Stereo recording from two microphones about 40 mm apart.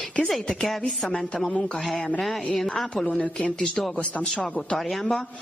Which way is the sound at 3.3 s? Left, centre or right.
Centre.